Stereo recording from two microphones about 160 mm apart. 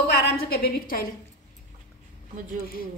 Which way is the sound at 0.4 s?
70° left (ahead or behind).